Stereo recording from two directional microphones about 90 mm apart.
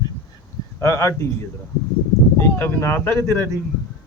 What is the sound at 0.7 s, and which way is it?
Speech, 35° left (ahead or behind).